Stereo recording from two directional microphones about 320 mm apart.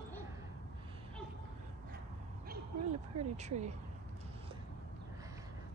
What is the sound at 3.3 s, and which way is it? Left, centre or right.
Speech, right.